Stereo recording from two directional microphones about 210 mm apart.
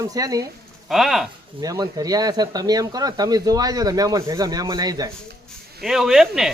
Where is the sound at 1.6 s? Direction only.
15° right (ahead or behind).